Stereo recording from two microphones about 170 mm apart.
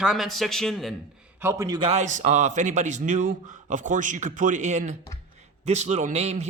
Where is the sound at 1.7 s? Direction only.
35° right (ahead or behind).